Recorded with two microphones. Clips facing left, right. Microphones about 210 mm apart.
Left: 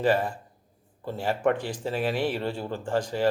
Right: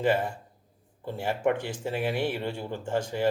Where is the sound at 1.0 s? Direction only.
20° right (ahead or behind).